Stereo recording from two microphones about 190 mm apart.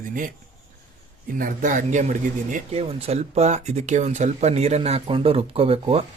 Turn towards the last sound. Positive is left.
turn(degrees=-30)  # may be behind; listen again after turning